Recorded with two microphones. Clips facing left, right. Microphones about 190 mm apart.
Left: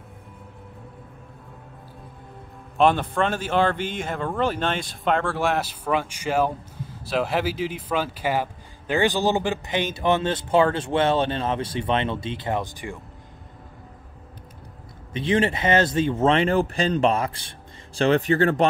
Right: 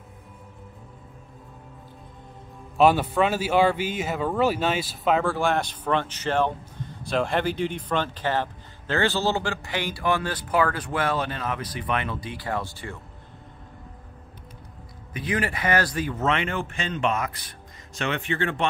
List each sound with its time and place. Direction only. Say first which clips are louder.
2.8 s speech: right 1 dB; 5° right (ahead or behind); by 12.9 s 15° left (ahead or behind)
15.1 s speech: left 6 dB; 25° left (ahead or behind)